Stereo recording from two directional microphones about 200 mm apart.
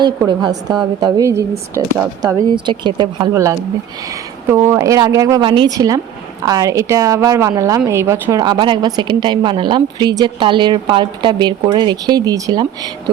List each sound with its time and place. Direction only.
0.0 s a woman's voice: 20° right (ahead or behind)